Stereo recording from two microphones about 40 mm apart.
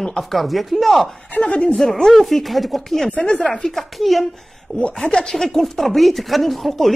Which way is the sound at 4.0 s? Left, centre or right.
Centre.